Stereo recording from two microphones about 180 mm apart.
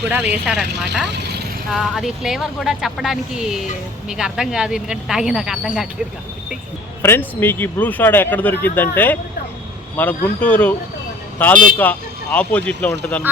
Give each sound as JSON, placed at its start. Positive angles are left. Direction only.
{"t": 0.2, "sound": "speech", "side_deg": -65}
{"t": 0.4, "sound": "speech", "side_deg": -5}
{"t": 1.0, "sound": "speech", "side_deg": -70}
{"t": 1.7, "sound": "speech", "side_deg": 0}
{"t": 7.0, "sound": "speech", "side_deg": 10}